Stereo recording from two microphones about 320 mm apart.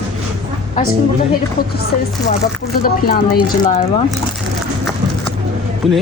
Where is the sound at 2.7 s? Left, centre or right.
Left.